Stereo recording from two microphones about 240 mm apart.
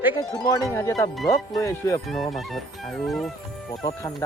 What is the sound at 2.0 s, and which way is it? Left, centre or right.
Speech, centre.